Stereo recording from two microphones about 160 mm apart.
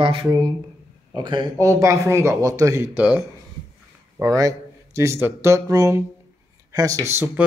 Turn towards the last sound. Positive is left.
turn(degrees=-15)  # may be behind; listen again after turning